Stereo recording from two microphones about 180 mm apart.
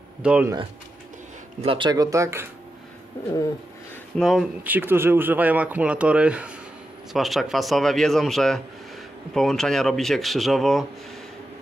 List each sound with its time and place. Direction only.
0.2 s speech: 5° right (ahead or behind)
1.6 s speech: 30° right (ahead or behind)
4.2 s speech: centre (ahead or behind)
4.6 s speech: 10° right (ahead or behind)